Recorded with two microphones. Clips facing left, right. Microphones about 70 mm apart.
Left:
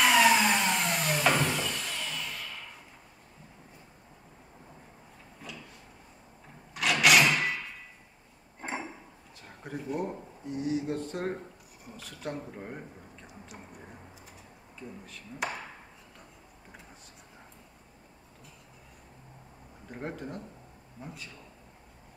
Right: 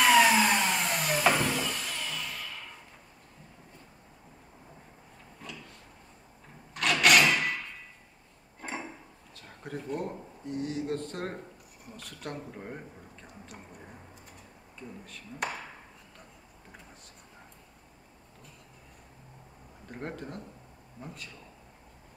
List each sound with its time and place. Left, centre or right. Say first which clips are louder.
0.0 s vacuum cleaner: right 1 dB; centre
6.7 s a sound: even; centre
8.5 s a sound: left 2 dB; centre
9.6 s speech: left 1 dB; centre
14.8 s speech: even; centre
19.9 s speech: left 1 dB; centre